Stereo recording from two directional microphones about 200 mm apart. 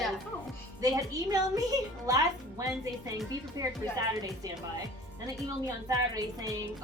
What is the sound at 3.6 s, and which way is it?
Speech, 20° right (ahead or behind).